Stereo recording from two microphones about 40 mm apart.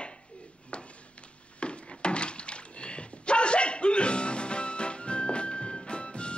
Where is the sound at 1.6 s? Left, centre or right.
Left.